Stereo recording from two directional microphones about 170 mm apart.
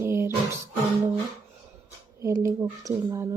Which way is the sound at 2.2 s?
15° right (ahead or behind).